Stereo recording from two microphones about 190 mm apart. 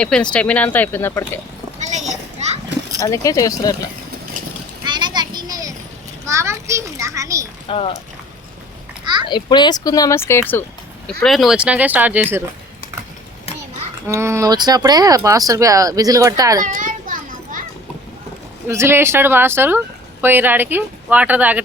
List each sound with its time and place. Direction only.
0.0 s speech: 5° left (ahead or behind)
1.8 s children playing: 40° right (ahead or behind)
3.0 s speech: 15° left (ahead or behind)
4.9 s children playing: 25° right (ahead or behind)
6.2 s a sound: 15° right (ahead or behind)
7.7 s speech: 30° left (ahead or behind)
9.2 s speech: 25° left (ahead or behind)
11.2 s speech: centre (ahead or behind)
14.1 s speech: 15° right (ahead or behind)
16.6 s children playing: 45° right (ahead or behind)
18.7 s speech: 15° right (ahead or behind)